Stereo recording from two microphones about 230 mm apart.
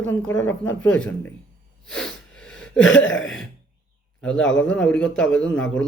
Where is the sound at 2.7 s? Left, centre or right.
Left.